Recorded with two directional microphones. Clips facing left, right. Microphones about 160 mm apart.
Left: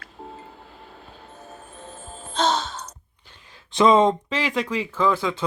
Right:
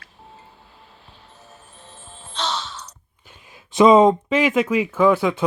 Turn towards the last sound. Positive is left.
turn(degrees=-15)  # may be behind; listen again after turning